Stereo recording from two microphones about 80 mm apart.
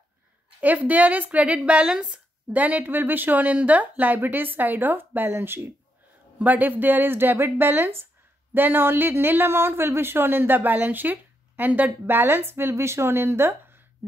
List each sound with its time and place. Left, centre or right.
0.6 s a woman's voice: centre